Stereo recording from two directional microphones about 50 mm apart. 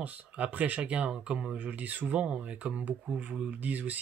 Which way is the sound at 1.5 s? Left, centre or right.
Right.